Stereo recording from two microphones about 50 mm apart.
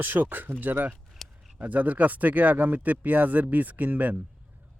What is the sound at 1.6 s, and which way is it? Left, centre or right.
Speech, right.